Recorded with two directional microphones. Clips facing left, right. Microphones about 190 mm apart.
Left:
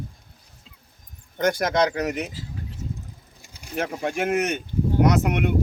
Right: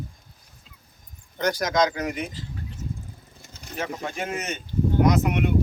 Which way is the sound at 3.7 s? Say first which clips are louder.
Left 5 dB; 60° left (ahead or behind).